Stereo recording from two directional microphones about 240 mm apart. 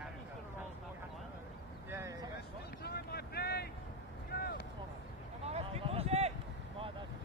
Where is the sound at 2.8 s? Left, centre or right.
Left.